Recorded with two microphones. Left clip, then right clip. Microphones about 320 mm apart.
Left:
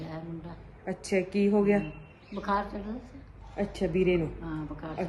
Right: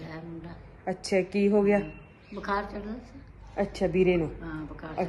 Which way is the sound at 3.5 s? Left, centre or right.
Centre.